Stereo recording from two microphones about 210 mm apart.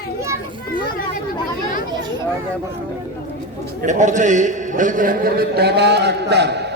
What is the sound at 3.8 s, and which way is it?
A man's voice, 35° right (ahead or behind).